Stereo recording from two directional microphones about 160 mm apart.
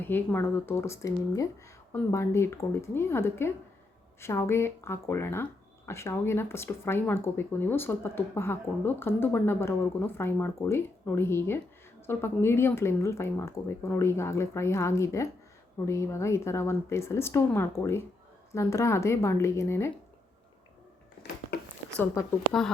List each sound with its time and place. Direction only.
0.0 s speech: 10° left (ahead or behind)
21.9 s speech: 15° left (ahead or behind)